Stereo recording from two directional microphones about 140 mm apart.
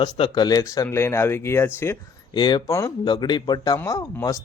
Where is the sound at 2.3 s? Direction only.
30° left (ahead or behind).